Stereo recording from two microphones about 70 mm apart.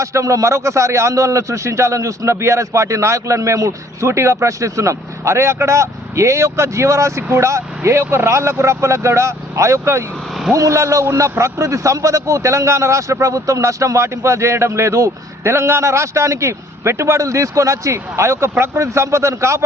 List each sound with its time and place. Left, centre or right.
0.0 s speech: right